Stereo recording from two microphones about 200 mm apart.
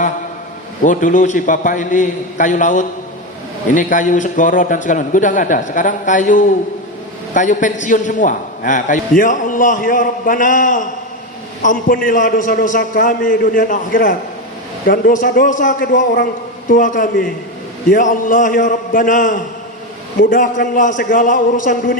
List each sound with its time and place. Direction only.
0.9 s a man's voice: 40° left (ahead or behind)